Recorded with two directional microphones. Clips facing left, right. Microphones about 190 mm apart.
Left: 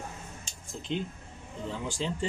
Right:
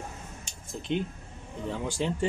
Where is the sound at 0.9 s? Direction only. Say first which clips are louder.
Right 3 dB; 55° right (ahead or behind).